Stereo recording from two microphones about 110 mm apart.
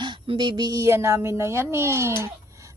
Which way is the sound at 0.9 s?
25° right (ahead or behind).